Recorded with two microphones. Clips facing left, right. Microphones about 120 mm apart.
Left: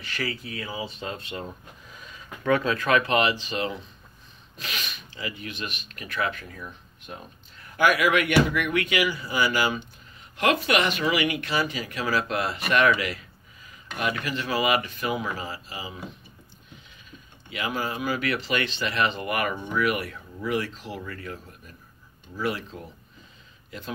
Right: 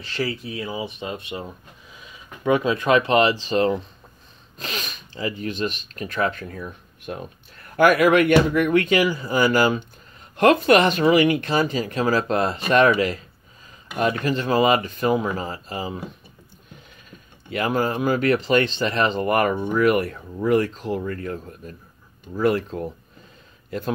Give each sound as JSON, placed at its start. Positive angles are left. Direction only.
{"t": 0.0, "sound": "speech", "side_deg": -25}
{"t": 1.9, "sound": "a sound", "side_deg": -5}
{"t": 2.4, "sound": "speech", "side_deg": -15}
{"t": 7.1, "sound": "speech", "side_deg": -65}
{"t": 7.7, "sound": "speech", "side_deg": -45}
{"t": 17.5, "sound": "speech", "side_deg": -45}